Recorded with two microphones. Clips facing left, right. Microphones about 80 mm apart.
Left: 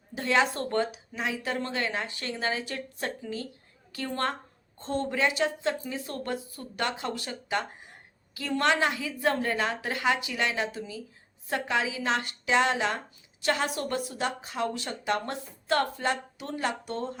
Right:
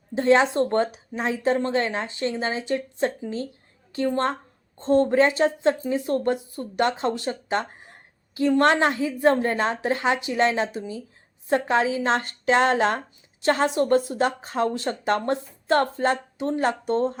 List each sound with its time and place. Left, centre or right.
0.1 s a woman's voice: right
8.6 s a woman's voice: right
13.4 s a woman's voice: right